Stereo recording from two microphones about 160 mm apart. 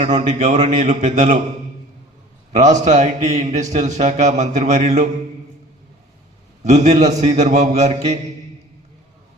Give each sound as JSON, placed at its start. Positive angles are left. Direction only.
{"t": 0.0, "sound": "a man's voice", "side_deg": -45}
{"t": 2.5, "sound": "a man's voice", "side_deg": -45}
{"t": 6.7, "sound": "a man's voice", "side_deg": -45}